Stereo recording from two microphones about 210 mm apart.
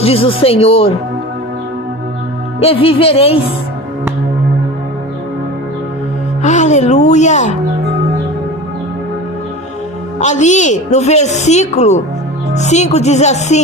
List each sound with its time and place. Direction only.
0.0 s speech: 25° left (ahead or behind)
2.6 s speech: 25° left (ahead or behind)
6.4 s a woman's voice: 35° left (ahead or behind)
10.2 s a woman's voice: 35° left (ahead or behind)